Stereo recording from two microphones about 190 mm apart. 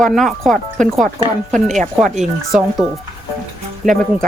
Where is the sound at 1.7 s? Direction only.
40° right (ahead or behind).